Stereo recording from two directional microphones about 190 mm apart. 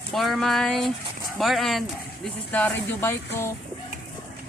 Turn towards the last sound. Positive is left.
turn(degrees=10)  # may be behind; listen again after turning